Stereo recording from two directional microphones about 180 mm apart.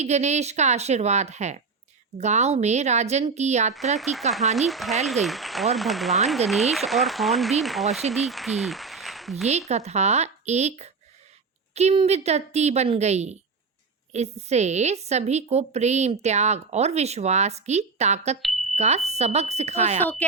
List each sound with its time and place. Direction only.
0.0 s a woman's voice: 40° right (ahead or behind)
3.9 s speech: centre (ahead or behind)
9.4 s a woman's voice: 35° right (ahead or behind)